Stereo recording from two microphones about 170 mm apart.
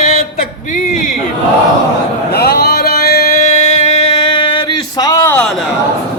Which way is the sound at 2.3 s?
65° left (ahead or behind).